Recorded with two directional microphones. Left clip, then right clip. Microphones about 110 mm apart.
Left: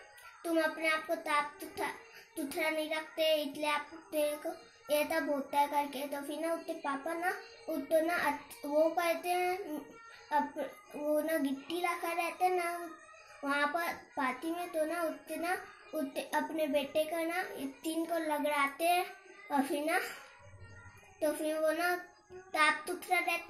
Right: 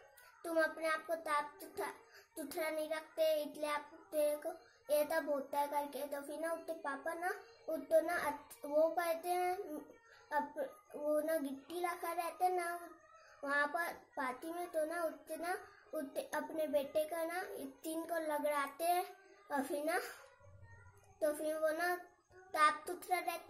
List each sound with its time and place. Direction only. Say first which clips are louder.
0.4 s a child's voice: left 3 dB; 35° right (ahead or behind)
21.2 s a child's voice: left 4 dB; 35° right (ahead or behind)